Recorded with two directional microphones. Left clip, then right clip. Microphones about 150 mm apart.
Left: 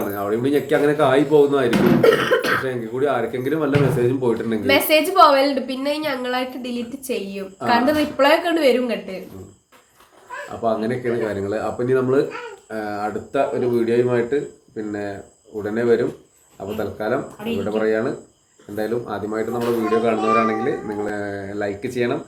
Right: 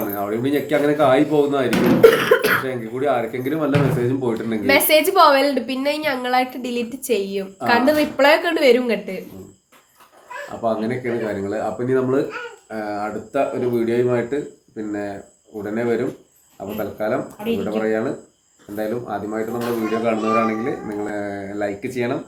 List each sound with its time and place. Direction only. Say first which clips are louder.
0.1 s speech: left 3 dB; 15° left (ahead or behind)
2.0 s a woman's voice: right 5 dB; 55° right (ahead or behind)
2.6 s speech: even; 15° left (ahead or behind)
4.6 s a woman's voice: right 2 dB; 55° right (ahead or behind)
10.6 s speech: left 1 dB; 10° left (ahead or behind)